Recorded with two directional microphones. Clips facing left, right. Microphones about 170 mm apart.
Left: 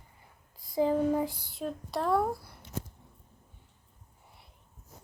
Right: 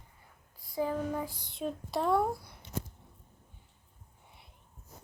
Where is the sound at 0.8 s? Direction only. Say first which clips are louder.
Left 6 dB; 25° left (ahead or behind).